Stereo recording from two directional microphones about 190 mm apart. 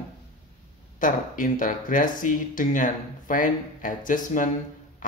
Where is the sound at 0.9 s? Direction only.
45° left (ahead or behind).